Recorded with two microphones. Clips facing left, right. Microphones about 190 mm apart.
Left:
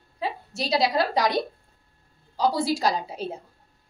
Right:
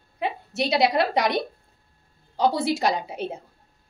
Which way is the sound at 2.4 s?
25° right (ahead or behind).